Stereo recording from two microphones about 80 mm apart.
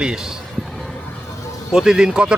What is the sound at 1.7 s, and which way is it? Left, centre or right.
Speech, centre.